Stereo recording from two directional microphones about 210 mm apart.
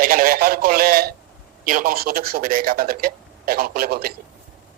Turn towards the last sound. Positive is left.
turn(degrees=-45)  # may be behind; listen again after turning